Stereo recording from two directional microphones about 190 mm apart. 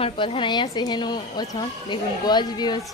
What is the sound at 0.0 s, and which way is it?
A woman's voice, 25° left (ahead or behind).